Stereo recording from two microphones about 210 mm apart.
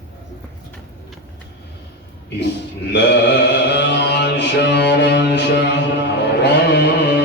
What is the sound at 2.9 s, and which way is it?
Mantra, 55° left (ahead or behind).